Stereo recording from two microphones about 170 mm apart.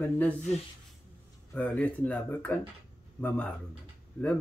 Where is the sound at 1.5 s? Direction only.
10° left (ahead or behind).